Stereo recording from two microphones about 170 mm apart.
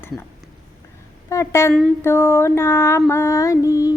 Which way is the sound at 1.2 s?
15° left (ahead or behind).